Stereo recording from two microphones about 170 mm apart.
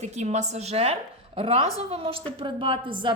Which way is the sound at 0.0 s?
40° right (ahead or behind).